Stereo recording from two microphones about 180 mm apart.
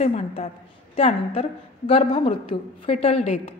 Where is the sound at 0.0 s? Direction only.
35° left (ahead or behind).